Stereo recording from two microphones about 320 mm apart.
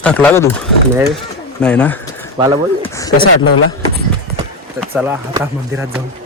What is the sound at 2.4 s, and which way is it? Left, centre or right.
Speech, centre.